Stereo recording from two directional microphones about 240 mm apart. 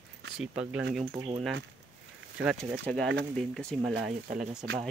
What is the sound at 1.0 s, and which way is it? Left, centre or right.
Speech, centre.